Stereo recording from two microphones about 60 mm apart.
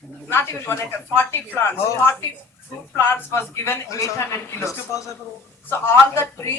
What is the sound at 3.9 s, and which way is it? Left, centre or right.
A man's voice, left.